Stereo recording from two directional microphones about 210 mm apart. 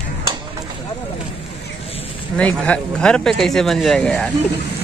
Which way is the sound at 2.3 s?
5° left (ahead or behind).